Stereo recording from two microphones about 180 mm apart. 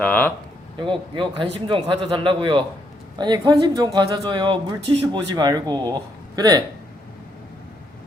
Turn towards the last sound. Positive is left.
turn(degrees=-20)  # may be behind; listen again after turning